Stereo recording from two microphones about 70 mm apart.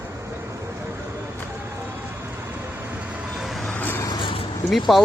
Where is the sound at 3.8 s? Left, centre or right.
Left.